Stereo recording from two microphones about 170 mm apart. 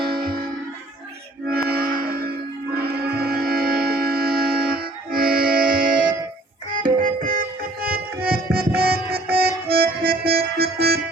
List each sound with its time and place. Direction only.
1.5 s music: 65° right (ahead or behind)